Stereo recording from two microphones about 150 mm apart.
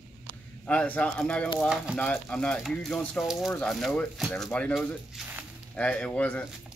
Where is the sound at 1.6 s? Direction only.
5° right (ahead or behind).